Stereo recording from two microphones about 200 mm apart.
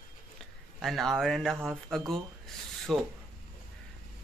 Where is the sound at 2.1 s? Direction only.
Centre (ahead or behind).